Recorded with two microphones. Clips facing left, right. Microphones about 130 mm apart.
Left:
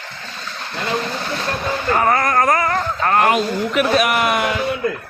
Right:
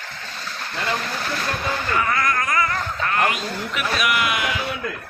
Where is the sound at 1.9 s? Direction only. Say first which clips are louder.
Left 7 dB; 40° left (ahead or behind).